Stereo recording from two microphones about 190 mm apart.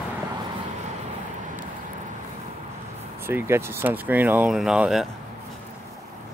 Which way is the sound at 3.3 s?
15° right (ahead or behind).